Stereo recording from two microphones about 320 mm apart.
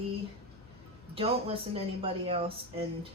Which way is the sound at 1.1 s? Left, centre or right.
Centre.